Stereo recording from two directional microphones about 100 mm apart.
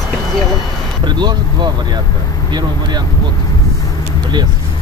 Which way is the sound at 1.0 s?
45° right (ahead or behind).